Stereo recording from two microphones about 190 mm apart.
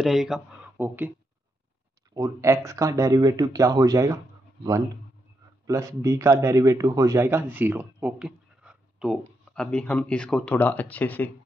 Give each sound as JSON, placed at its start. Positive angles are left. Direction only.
{"t": 0.0, "sound": "speech", "side_deg": 0}
{"t": 2.1, "sound": "speech", "side_deg": -15}
{"t": 5.7, "sound": "a man's voice", "side_deg": -15}